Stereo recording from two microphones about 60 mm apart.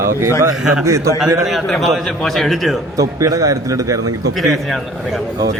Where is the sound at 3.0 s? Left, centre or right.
Right.